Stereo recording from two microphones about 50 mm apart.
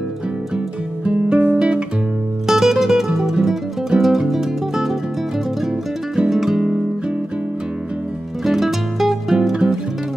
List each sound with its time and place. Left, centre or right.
1.0 s music: centre
1.6 s guitar: centre
2.4 s music: centre
6.1 s music: centre
8.5 s music: centre